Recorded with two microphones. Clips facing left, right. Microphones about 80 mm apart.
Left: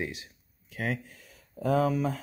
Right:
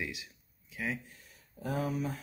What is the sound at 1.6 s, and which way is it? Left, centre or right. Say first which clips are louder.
Speech: left 8 dB; left.